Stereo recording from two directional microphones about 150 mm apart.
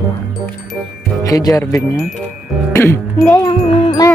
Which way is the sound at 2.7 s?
15° left (ahead or behind).